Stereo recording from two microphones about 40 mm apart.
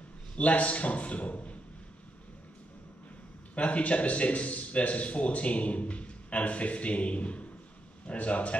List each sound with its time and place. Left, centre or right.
0.4 s speech: left
3.5 s speech: left